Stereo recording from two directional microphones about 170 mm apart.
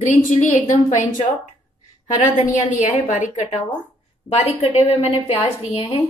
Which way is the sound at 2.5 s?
45° left (ahead or behind).